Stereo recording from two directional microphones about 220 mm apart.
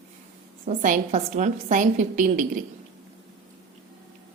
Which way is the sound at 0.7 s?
35° right (ahead or behind).